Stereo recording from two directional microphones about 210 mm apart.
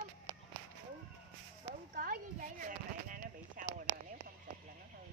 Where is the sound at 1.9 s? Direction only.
40° right (ahead or behind).